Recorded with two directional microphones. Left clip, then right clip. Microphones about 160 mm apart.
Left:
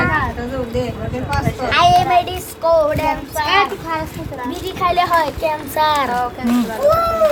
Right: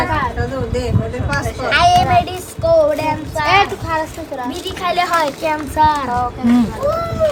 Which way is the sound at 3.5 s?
45° right (ahead or behind).